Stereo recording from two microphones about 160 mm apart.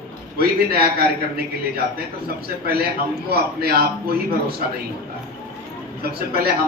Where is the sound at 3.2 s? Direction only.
75° right (ahead or behind).